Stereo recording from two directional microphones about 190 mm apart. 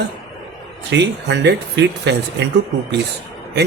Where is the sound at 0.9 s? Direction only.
65° right (ahead or behind).